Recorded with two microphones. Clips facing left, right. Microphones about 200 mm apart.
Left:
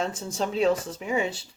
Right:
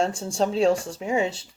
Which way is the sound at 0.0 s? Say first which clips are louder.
Right 5 dB; 30° right (ahead or behind).